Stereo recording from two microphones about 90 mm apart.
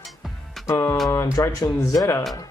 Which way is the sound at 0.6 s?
30° left (ahead or behind).